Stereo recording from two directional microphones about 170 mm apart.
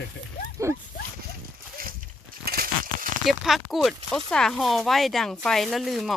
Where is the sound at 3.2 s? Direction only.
Centre (ahead or behind).